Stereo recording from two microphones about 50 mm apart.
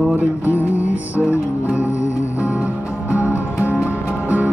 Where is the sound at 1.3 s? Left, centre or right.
Right.